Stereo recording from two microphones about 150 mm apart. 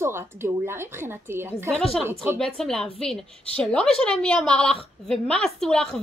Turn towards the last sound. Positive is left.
turn(degrees=5)  # may be behind; listen again after turning